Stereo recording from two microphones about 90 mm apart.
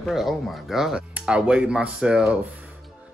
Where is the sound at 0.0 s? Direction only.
Centre (ahead or behind).